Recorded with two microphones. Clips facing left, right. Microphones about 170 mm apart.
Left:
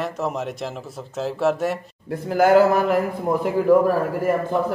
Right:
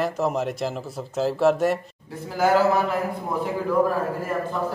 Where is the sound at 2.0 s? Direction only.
55° left (ahead or behind).